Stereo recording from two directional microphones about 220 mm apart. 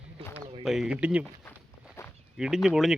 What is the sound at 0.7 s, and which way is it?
Speech, centre (ahead or behind).